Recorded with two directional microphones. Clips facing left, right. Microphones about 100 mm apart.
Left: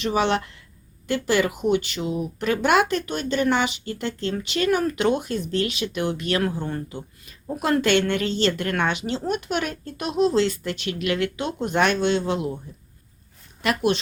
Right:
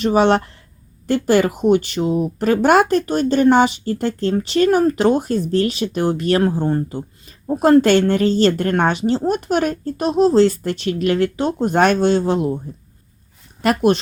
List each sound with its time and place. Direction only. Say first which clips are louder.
0.0 s speech: right 7 dB; 40° right (ahead or behind)
13.6 s speech: right 6 dB; 45° right (ahead or behind)